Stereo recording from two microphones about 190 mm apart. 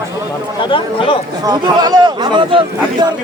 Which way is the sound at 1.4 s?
20° right (ahead or behind).